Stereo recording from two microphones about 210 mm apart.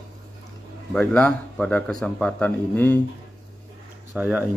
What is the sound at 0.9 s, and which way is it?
Speech, 5° left (ahead or behind).